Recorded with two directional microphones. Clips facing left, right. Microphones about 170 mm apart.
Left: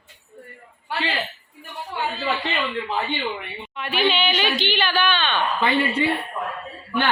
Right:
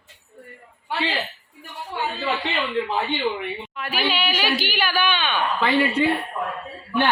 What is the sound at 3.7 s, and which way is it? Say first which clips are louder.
Speech: left 4 dB; 5° right (ahead or behind).